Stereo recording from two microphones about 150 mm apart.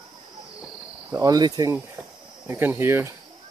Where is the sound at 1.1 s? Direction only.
25° right (ahead or behind).